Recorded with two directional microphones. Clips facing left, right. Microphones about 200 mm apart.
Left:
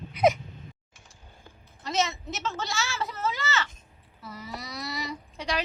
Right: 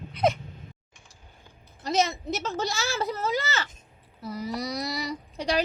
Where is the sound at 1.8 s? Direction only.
35° right (ahead or behind).